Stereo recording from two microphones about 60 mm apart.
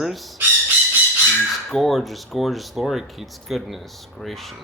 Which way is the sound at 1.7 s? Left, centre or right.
Centre.